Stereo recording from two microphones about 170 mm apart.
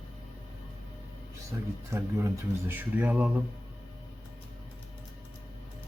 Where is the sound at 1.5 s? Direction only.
20° right (ahead or behind).